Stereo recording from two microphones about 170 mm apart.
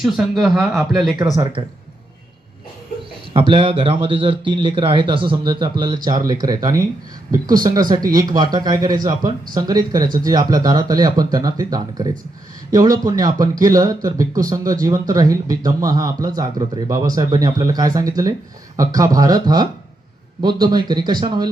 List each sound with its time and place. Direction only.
0.0 s speech: centre (ahead or behind)
1.6 s speech: 30° right (ahead or behind)
3.3 s speech: 30° right (ahead or behind)